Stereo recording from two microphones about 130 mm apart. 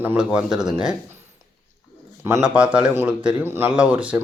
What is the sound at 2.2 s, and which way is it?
Speech, 20° right (ahead or behind).